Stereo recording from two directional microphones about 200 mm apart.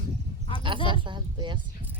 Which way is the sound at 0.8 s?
25° right (ahead or behind).